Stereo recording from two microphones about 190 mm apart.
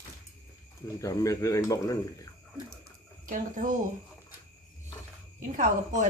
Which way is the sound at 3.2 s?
45° right (ahead or behind).